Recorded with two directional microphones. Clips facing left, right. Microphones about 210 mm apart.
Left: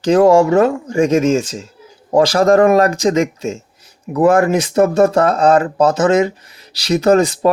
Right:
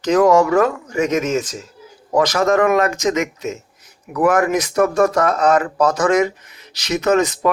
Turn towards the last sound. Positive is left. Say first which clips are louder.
# left 4 dB
turn(degrees=30)  # may be behind; listen again after turning